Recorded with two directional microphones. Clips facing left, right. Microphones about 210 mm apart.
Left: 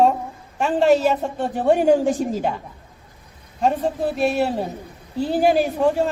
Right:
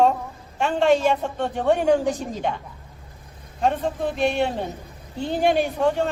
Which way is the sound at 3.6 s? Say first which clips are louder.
Left 2 dB; 5° left (ahead or behind).